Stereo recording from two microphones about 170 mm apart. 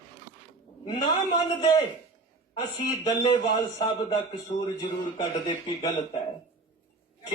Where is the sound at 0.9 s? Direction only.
25° left (ahead or behind).